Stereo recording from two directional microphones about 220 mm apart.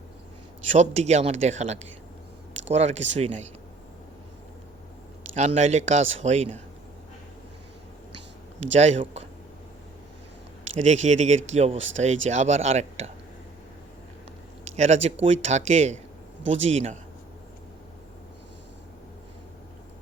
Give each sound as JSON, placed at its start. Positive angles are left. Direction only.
{"t": 0.7, "sound": "speech", "side_deg": -30}
{"t": 5.3, "sound": "speech", "side_deg": -30}
{"t": 8.7, "sound": "speech", "side_deg": -30}
{"t": 10.8, "sound": "speech", "side_deg": -30}
{"t": 14.6, "sound": "speech", "side_deg": -30}